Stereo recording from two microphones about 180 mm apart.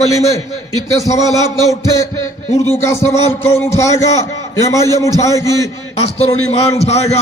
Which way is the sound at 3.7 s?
15° left (ahead or behind).